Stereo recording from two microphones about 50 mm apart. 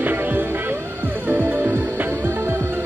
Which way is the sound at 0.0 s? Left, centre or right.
Right.